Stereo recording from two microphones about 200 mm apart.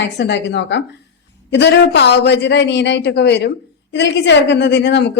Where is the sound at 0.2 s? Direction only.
60° left (ahead or behind).